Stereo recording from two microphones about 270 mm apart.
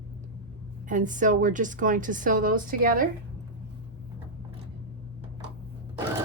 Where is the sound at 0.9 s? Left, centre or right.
Right.